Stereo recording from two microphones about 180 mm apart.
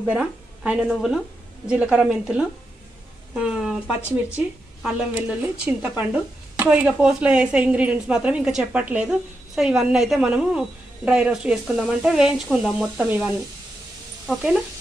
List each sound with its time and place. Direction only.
0.0 s speech: 5° right (ahead or behind)